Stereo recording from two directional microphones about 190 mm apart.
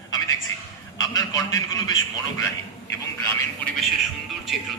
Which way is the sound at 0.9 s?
20° left (ahead or behind).